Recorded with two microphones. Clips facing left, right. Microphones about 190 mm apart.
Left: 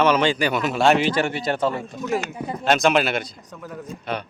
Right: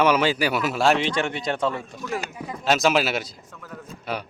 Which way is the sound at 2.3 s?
35° left (ahead or behind).